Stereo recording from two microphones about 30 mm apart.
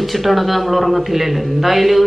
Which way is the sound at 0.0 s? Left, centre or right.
Centre.